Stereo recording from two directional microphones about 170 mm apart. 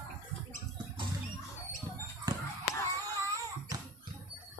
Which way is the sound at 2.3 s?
25° right (ahead or behind).